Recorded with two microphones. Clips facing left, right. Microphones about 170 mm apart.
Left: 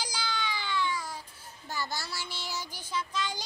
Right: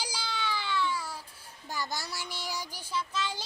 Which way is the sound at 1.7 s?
15° right (ahead or behind).